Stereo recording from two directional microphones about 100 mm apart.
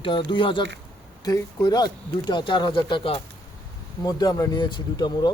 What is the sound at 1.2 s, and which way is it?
Speech, 40° left (ahead or behind).